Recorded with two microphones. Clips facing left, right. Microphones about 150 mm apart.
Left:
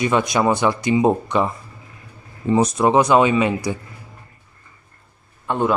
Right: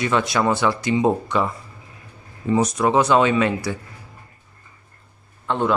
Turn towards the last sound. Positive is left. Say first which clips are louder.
# left 1 dB
turn(degrees=10)  # may be behind; listen again after turning